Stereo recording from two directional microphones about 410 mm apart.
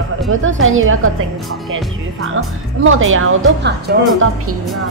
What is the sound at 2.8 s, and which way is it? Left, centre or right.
Speech, right.